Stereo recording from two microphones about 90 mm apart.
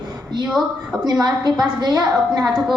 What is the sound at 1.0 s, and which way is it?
A woman's voice, 50° right (ahead or behind).